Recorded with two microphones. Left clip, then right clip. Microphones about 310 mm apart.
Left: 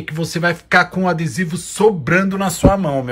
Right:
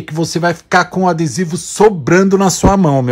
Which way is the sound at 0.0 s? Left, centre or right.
Centre.